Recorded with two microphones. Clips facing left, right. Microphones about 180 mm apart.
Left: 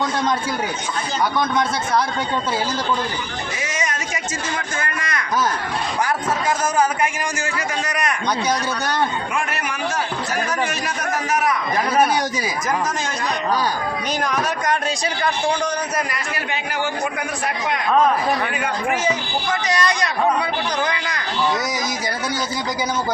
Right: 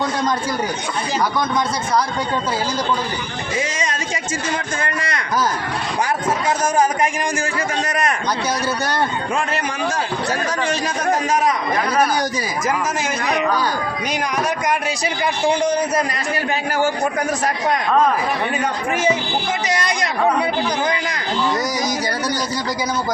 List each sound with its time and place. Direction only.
4.8 s a man's voice: 30° right (ahead or behind)
15.2 s a man's voice: 25° right (ahead or behind)
19.6 s a man's voice: 25° right (ahead or behind)